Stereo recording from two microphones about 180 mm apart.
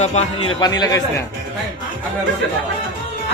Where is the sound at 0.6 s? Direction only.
20° left (ahead or behind).